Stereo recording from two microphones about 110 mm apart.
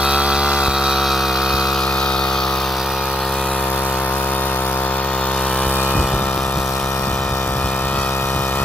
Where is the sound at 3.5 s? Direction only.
15° left (ahead or behind).